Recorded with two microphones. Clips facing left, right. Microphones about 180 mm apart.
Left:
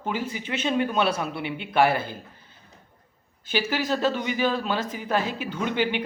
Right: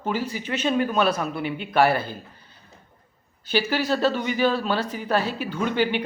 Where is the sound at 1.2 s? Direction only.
45° right (ahead or behind).